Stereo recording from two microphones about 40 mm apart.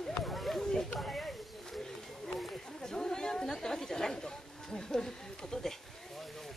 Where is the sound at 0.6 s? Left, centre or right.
Centre.